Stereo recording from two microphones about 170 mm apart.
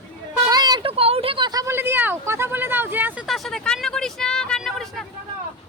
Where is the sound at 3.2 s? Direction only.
Centre (ahead or behind).